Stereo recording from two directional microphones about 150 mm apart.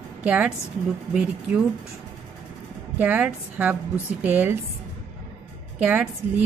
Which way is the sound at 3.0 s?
10° right (ahead or behind).